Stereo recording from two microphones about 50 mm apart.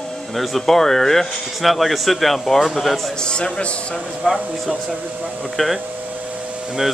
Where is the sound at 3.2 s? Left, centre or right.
Centre.